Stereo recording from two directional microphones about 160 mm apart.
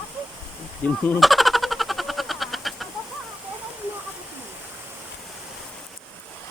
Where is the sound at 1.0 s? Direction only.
Centre (ahead or behind).